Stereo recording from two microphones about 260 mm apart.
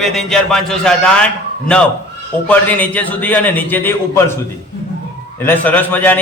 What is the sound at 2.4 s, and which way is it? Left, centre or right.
A man's voice, centre.